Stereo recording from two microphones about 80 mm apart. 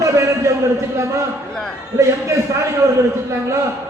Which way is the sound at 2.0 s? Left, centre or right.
Right.